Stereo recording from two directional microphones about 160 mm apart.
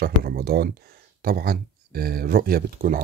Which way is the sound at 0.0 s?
75° right (ahead or behind).